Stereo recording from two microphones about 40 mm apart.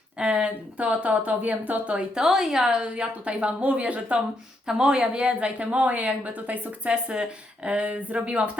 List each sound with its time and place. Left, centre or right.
0.2 s speech: right
2.1 s a woman's voice: centre
2.9 s speech: right
4.6 s speech: right
6.9 s speech: right